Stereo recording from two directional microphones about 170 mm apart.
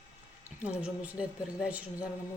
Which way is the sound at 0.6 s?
5° right (ahead or behind).